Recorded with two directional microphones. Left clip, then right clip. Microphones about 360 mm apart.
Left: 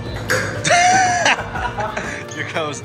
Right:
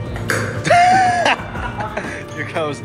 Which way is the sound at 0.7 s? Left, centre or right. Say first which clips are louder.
Right 2 dB; centre.